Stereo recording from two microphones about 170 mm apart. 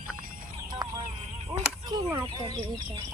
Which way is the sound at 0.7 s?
25° right (ahead or behind).